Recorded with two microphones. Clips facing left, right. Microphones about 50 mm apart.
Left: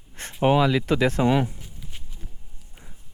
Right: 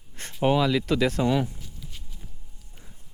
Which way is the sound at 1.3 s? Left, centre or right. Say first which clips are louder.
Left 3 dB; left.